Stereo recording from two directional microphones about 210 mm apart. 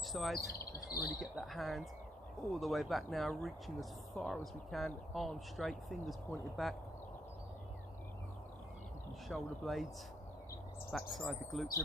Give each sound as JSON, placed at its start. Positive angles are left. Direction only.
{"t": 0.1, "sound": "speech", "side_deg": 0}
{"t": 0.4, "sound": "bird vocalization", "side_deg": 45}
{"t": 1.2, "sound": "speech", "side_deg": 0}
{"t": 9.3, "sound": "speech", "side_deg": 0}
{"t": 11.2, "sound": "speech", "side_deg": 0}